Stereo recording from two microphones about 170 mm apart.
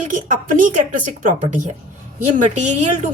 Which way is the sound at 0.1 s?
50° right (ahead or behind).